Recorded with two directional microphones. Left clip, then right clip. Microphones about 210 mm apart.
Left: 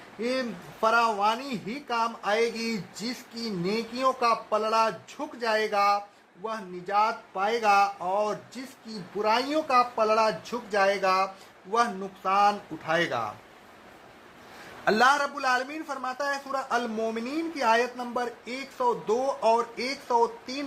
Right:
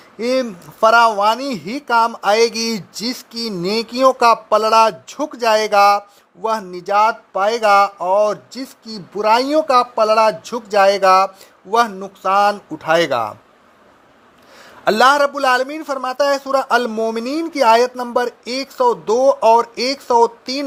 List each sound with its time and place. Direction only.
0.2 s a man's voice: 50° right (ahead or behind)
14.8 s a man's voice: 40° right (ahead or behind)